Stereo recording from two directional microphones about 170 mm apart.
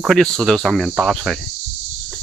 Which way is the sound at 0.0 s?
Centre (ahead or behind).